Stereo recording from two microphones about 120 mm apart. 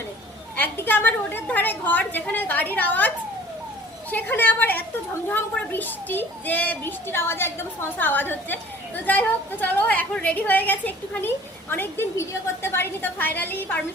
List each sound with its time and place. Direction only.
0.5 s a child's voice: 15° left (ahead or behind)
4.1 s a child's voice: 15° left (ahead or behind)